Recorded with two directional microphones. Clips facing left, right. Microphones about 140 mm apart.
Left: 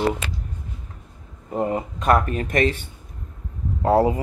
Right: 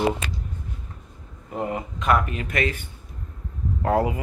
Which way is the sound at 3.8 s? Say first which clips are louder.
Left 4 dB; 35° left (ahead or behind).